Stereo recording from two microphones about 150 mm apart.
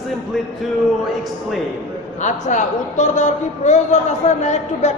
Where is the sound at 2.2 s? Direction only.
55° left (ahead or behind).